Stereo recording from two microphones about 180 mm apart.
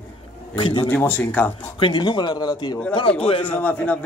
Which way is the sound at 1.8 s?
25° left (ahead or behind).